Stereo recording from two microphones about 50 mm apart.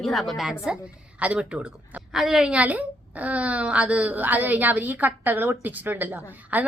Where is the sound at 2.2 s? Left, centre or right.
Centre.